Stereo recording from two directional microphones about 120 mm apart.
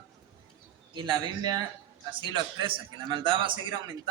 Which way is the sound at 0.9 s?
40° right (ahead or behind).